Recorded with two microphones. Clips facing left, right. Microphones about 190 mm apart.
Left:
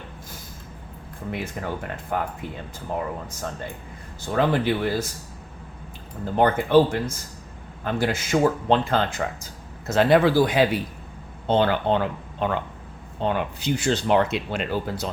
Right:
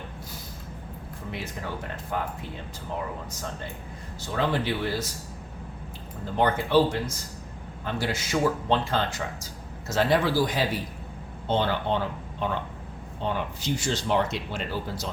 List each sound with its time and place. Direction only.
1.6 s speech: 60° left (ahead or behind)
4.4 s speech: 50° left (ahead or behind)
6.3 s speech: 50° left (ahead or behind)